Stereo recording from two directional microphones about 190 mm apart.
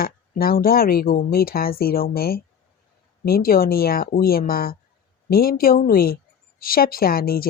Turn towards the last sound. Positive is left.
turn(degrees=50)  # may be behind; listen again after turning